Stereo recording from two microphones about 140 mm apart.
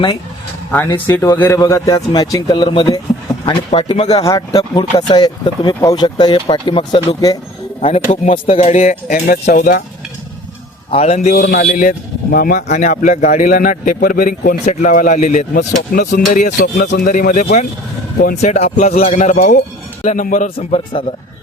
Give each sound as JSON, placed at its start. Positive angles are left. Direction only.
{"t": 0.9, "sound": "a man's voice", "side_deg": 15}
{"t": 4.1, "sound": "speech", "side_deg": 25}
{"t": 7.8, "sound": "speech", "side_deg": 45}
{"t": 10.9, "sound": "speech", "side_deg": 50}
{"t": 11.3, "sound": "a man's voice", "side_deg": 75}
{"t": 14.6, "sound": "speech", "side_deg": 60}
{"t": 18.3, "sound": "speech", "side_deg": 50}